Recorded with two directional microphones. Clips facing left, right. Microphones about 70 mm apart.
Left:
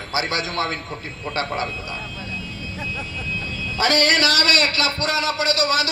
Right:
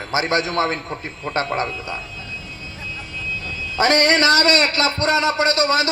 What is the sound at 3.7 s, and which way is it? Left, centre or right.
A man's voice, right.